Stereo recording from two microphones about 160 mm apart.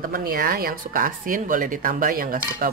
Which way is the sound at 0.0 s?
65° right (ahead or behind).